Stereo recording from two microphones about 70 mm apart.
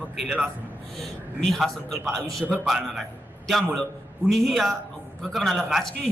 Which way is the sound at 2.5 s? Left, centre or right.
Centre.